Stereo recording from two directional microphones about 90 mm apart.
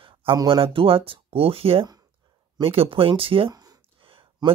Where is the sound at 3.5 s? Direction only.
45° right (ahead or behind).